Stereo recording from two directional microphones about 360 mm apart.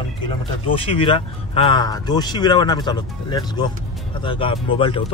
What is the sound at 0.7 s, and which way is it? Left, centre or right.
Speech, centre.